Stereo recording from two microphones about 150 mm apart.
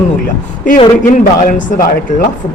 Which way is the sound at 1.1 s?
60° left (ahead or behind).